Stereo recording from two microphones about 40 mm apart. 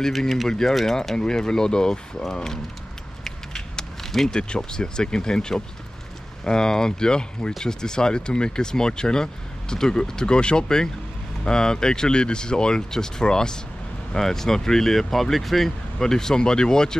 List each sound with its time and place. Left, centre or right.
0.5 s speech: centre
3.3 s a sound: centre
4.3 s speech: left